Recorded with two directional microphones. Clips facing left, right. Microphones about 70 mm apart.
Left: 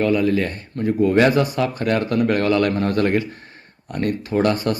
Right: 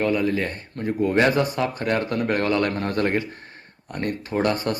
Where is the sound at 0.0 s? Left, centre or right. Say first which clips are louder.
Left 4 dB; right.